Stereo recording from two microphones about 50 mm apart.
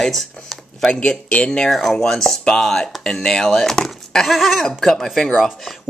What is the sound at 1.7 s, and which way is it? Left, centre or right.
Speech, centre.